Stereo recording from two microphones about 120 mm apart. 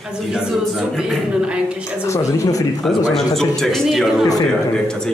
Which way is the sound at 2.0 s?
25° left (ahead or behind).